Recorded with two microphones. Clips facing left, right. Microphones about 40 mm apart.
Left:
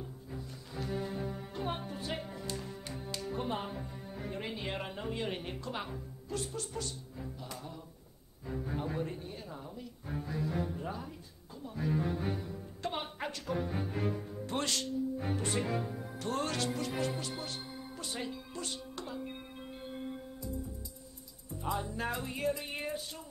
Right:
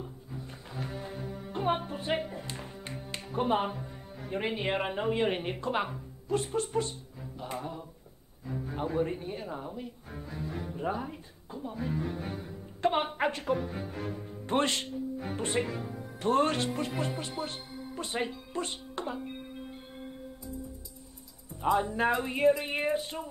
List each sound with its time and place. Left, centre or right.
0.7 s music: right
1.1 s music: centre
1.5 s music: right
3.3 s speech: right
7.3 s music: right
8.5 s music: centre
9.0 s speech: right
10.0 s speech: centre
10.8 s speech: right
11.9 s speech: centre
12.8 s speech: right
13.6 s speech: centre
14.4 s speech: right
21.7 s speech: right